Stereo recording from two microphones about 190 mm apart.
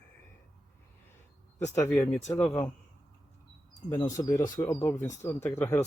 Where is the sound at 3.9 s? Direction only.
15° left (ahead or behind).